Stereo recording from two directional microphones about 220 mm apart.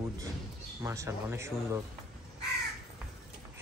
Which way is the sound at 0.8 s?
15° right (ahead or behind).